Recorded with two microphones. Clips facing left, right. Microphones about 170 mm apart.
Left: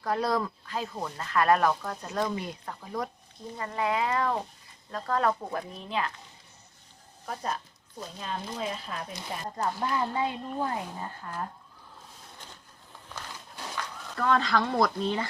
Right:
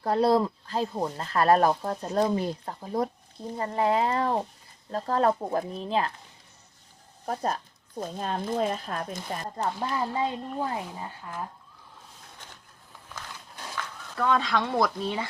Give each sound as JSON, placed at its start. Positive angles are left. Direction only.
{"t": 0.0, "sound": "speech", "side_deg": -30}
{"t": 7.3, "sound": "speech", "side_deg": -40}
{"t": 9.6, "sound": "speech", "side_deg": -30}
{"t": 14.2, "sound": "speech", "side_deg": 0}